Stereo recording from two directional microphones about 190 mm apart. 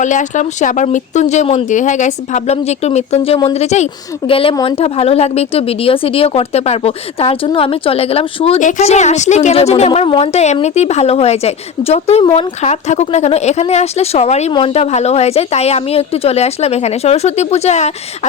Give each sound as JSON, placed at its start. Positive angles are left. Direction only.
{"t": 0.0, "sound": "a woman's voice", "side_deg": 40}